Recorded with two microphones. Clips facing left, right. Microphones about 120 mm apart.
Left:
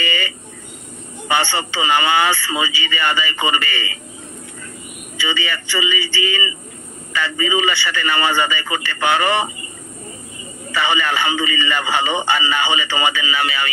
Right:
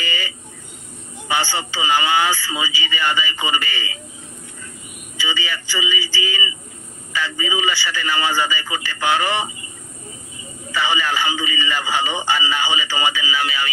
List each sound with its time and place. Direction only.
0.0 s a sound: 65° left (ahead or behind)
1.3 s speech: 65° left (ahead or behind)
5.1 s speech: 60° left (ahead or behind)
10.7 s speech: 65° left (ahead or behind)